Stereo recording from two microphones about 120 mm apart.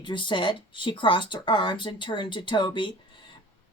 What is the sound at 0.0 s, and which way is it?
A woman's voice, 40° left (ahead or behind).